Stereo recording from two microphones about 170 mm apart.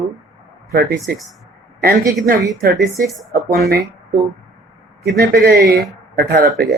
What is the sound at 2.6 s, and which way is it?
A man's voice, 65° right (ahead or behind).